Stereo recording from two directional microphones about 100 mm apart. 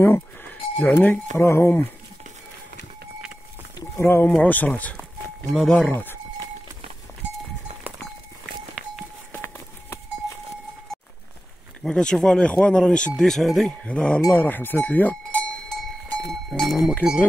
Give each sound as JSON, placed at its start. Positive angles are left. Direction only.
{"t": 0.0, "sound": "livestock", "side_deg": 20}
{"t": 1.0, "sound": "speech", "side_deg": 20}
{"t": 4.0, "sound": "speech", "side_deg": 20}
{"t": 5.5, "sound": "speech", "side_deg": 0}
{"t": 5.9, "sound": "speech", "side_deg": 20}
{"t": 9.3, "sound": "a sound", "side_deg": 25}
{"t": 11.8, "sound": "speech", "side_deg": 10}
{"t": 14.3, "sound": "cowbell", "side_deg": 20}